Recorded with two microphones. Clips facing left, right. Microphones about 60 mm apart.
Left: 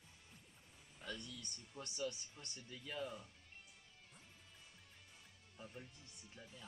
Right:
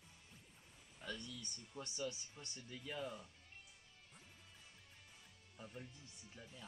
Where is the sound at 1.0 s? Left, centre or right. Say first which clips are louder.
Right 1 dB; centre.